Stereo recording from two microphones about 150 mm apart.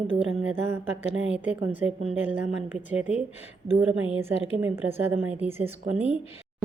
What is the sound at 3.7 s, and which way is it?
Speech, 40° right (ahead or behind).